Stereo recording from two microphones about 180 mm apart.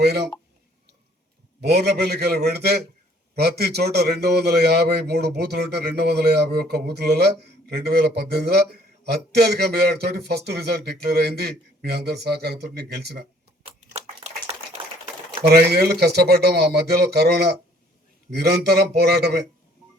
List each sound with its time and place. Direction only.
0.0 s a man's voice: 65° right (ahead or behind)
1.6 s a man's voice: 60° right (ahead or behind)
13.9 s a sound: 30° right (ahead or behind)
15.5 s a man's voice: 60° right (ahead or behind)